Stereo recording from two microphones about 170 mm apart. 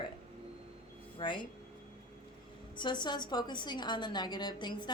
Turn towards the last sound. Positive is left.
turn(degrees=25)  # may be behind; listen again after turning